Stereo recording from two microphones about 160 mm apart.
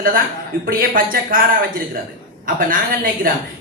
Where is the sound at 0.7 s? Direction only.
65° right (ahead or behind).